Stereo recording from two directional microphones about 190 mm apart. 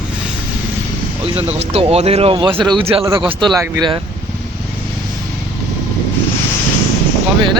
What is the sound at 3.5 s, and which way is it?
Speech, 15° right (ahead or behind).